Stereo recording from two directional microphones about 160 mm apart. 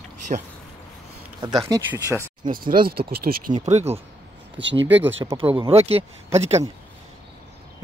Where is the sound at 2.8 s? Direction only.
70° right (ahead or behind).